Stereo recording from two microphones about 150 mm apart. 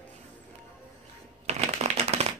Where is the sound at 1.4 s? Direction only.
45° right (ahead or behind).